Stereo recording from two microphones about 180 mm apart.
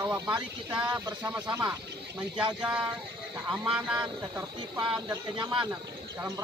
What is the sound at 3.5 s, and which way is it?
Speech, 5° right (ahead or behind).